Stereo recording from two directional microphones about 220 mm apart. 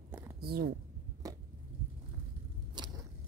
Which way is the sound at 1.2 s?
15° right (ahead or behind).